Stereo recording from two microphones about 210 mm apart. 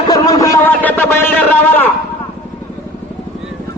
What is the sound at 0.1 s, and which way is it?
Music, 15° left (ahead or behind).